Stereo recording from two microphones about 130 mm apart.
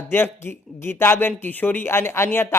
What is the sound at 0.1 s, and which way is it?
Speech, 15° left (ahead or behind).